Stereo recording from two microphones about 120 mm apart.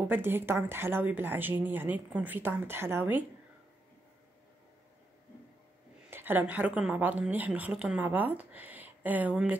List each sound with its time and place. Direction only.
0.1 s a woman's voice: 20° right (ahead or behind)
6.0 s a woman's voice: 15° right (ahead or behind)